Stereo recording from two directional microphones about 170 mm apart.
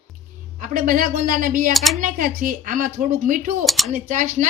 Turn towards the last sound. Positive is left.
turn(degrees=-50)  # may be behind; listen again after turning